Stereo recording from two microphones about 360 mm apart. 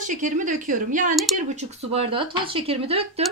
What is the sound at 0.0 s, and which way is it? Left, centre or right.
A woman's voice, right.